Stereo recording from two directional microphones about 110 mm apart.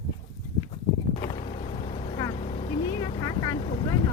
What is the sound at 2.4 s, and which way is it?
Vehicle, 75° left (ahead or behind).